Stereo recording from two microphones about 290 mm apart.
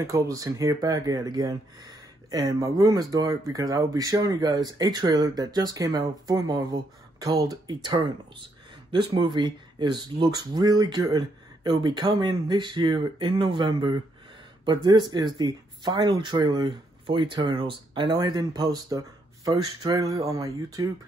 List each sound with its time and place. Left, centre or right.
0.0 s speech: centre